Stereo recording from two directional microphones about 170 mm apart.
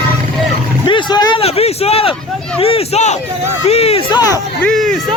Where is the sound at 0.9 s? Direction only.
25° left (ahead or behind).